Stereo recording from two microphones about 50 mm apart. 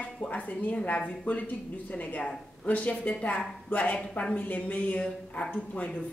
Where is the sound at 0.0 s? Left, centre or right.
Left.